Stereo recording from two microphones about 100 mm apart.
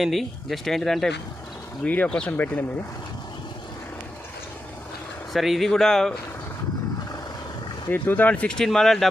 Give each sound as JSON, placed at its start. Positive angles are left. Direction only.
{"t": 0.0, "sound": "speech", "side_deg": 0}
{"t": 1.8, "sound": "speech", "side_deg": 15}
{"t": 5.3, "sound": "speech", "side_deg": 0}
{"t": 7.9, "sound": "speech", "side_deg": 15}